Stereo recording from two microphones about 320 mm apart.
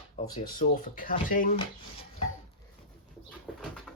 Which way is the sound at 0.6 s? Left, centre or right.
Centre.